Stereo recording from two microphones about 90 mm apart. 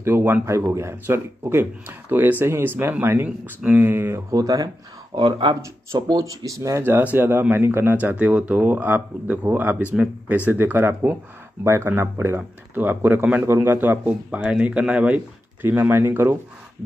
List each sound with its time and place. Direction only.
0.0 s speech: 25° right (ahead or behind)
4.3 s speech: 40° right (ahead or behind)
5.1 s speech: 65° right (ahead or behind)
5.9 s speech: 45° right (ahead or behind)
6.8 s speech: 20° right (ahead or behind)